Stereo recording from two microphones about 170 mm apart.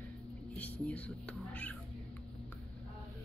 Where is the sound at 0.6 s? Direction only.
10° left (ahead or behind).